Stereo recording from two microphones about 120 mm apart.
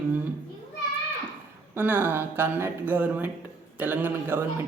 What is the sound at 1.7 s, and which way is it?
Speech, 15° right (ahead or behind).